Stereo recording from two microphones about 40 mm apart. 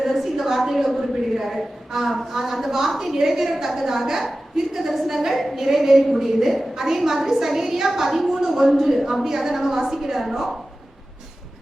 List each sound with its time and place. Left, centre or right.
0.0 s a woman's voice: centre